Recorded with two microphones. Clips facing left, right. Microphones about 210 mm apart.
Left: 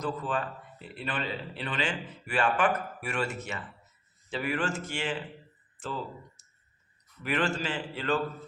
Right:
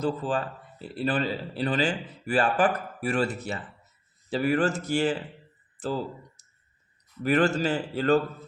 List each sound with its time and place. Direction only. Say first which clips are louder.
0.0 s a man's voice: right 4 dB; 30° right (ahead or behind)